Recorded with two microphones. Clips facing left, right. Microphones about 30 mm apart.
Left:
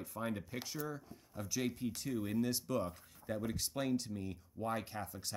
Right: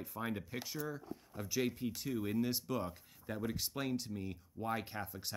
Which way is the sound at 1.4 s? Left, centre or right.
Centre.